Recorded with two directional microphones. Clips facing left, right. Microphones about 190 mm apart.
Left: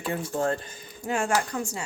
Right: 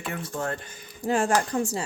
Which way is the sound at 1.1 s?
35° right (ahead or behind).